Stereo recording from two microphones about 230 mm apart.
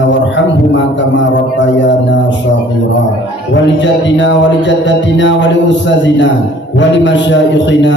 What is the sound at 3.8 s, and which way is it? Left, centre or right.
Music, left.